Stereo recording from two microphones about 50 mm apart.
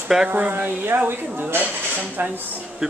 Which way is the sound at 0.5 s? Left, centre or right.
Right.